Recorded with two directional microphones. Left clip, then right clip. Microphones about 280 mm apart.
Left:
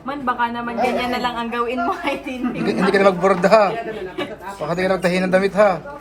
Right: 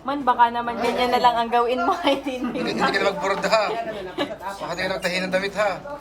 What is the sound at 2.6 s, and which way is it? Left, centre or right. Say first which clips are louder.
Speech: left 6 dB; centre.